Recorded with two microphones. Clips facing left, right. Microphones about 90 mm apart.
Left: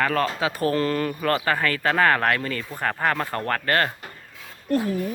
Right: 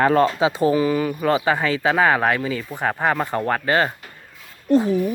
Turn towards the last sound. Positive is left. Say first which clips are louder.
# right 6 dB
turn(degrees=-20)  # may be behind; listen again after turning